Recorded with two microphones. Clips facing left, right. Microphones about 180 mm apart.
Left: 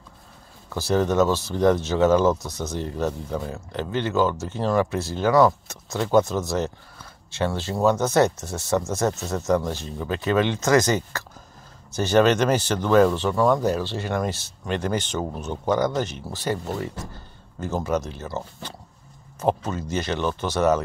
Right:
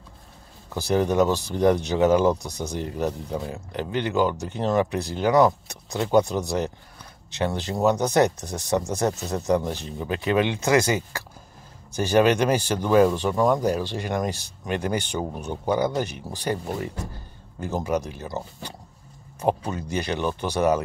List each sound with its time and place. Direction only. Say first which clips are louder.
0.7 s speech: even; 15° right (ahead or behind)